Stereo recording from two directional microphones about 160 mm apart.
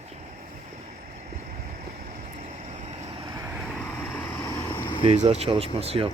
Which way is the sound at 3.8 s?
10° left (ahead or behind).